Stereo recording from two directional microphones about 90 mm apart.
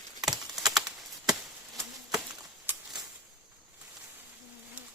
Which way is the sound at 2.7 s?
25° right (ahead or behind).